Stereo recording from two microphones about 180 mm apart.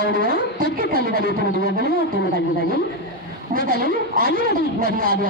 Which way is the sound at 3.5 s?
50° right (ahead or behind).